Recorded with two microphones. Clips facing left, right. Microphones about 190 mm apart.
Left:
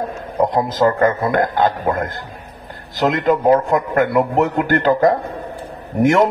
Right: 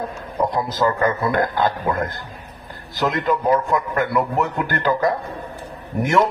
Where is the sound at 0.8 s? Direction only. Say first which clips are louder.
Left 4 dB; 35° left (ahead or behind).